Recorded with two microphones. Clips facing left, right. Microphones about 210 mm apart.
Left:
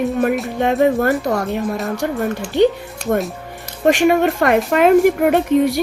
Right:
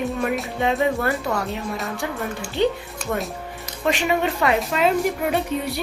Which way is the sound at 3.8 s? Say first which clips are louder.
Left 8 dB; 50° left (ahead or behind).